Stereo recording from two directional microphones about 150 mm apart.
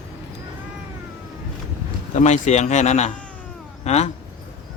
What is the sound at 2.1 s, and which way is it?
Speech, 50° left (ahead or behind).